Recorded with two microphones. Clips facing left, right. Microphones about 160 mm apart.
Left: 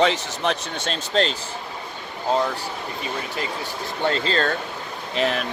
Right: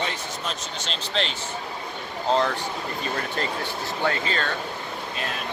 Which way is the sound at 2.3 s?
10° left (ahead or behind).